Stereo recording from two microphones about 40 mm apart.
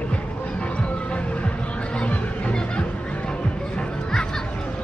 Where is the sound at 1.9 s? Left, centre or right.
Left.